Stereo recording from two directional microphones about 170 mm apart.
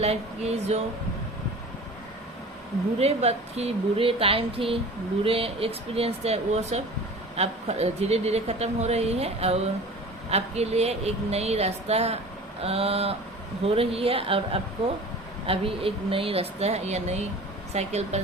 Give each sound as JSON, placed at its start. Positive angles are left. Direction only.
{"t": 0.0, "sound": "a woman's voice", "side_deg": -40}
{"t": 3.0, "sound": "a woman's voice", "side_deg": -40}